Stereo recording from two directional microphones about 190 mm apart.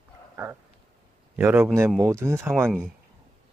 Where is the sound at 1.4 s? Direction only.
10° right (ahead or behind).